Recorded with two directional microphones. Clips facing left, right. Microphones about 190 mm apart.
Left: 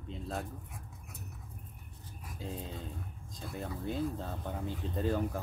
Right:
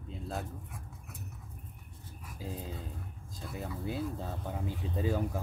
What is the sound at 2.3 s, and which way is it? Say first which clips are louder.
Speech: even; 5° right (ahead or behind).